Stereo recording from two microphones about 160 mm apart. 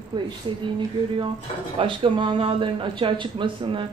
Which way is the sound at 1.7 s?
30° right (ahead or behind).